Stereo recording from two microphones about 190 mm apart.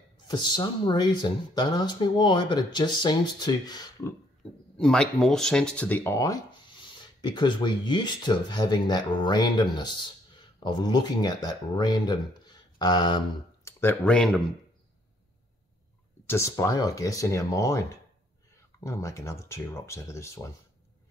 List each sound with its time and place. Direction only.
0.3 s speech: 25° left (ahead or behind)
4.7 s speech: 5° left (ahead or behind); by 13.2 s 20° left (ahead or behind)
13.7 s speech: 10° left (ahead or behind)
16.3 s speech: 15° left (ahead or behind)